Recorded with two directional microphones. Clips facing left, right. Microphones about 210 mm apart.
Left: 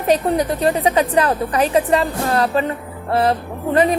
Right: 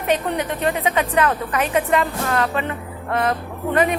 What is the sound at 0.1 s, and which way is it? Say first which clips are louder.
A woman's voice: left 5 dB; 35° left (ahead or behind).